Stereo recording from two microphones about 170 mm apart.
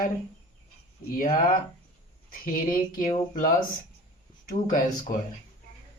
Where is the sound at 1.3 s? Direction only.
55° left (ahead or behind).